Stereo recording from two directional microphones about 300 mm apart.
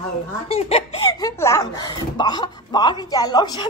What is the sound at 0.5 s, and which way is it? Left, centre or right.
Speech, centre.